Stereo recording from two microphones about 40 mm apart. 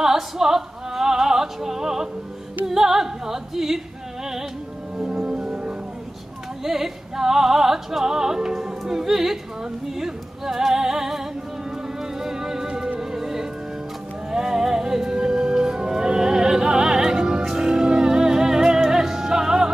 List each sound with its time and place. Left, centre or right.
0.0 s opera: centre
2.6 s music: centre
5.3 s music: right
6.6 s music: centre